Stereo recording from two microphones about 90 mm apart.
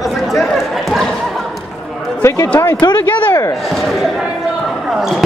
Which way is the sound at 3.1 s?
20° left (ahead or behind).